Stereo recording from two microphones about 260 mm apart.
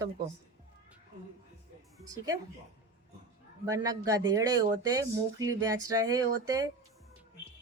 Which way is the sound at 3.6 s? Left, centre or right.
Centre.